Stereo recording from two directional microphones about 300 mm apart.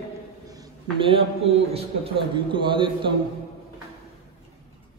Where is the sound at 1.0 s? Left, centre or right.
Centre.